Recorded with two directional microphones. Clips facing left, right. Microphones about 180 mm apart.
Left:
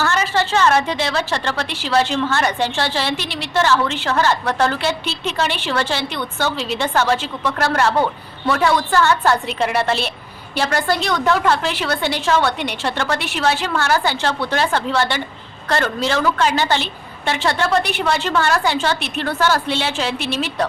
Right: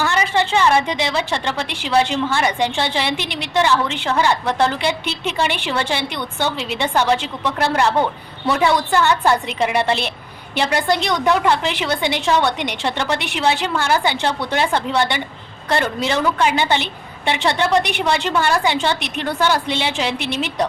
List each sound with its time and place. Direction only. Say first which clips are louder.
0.0 s a woman's voice: even; 15° right (ahead or behind)